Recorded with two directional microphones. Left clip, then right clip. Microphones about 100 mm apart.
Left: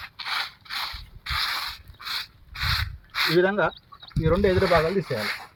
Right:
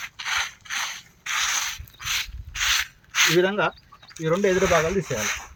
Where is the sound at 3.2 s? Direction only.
15° right (ahead or behind).